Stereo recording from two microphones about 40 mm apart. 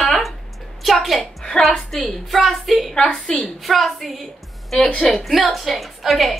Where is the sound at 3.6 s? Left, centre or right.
Centre.